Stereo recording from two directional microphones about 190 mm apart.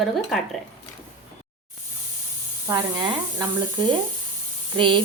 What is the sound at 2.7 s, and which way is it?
Speech, 20° right (ahead or behind).